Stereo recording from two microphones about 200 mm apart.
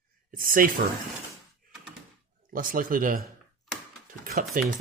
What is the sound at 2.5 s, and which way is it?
Speech, 45° right (ahead or behind).